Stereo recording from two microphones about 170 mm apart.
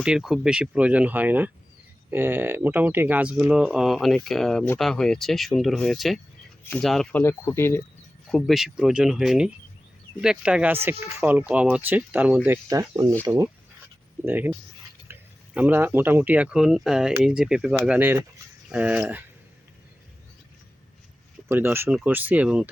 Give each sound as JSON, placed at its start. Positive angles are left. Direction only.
{"t": 0.0, "sound": "speech", "side_deg": -5}
{"t": 8.3, "sound": "speech", "side_deg": 0}
{"t": 12.6, "sound": "speech", "side_deg": -20}
{"t": 21.5, "sound": "speech", "side_deg": -15}